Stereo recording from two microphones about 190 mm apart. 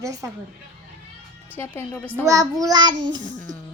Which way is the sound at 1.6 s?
10° left (ahead or behind).